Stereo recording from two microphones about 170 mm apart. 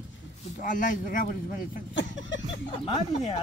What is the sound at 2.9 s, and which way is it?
Speech, 35° left (ahead or behind).